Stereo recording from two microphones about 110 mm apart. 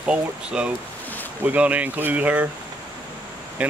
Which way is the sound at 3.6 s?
10° right (ahead or behind).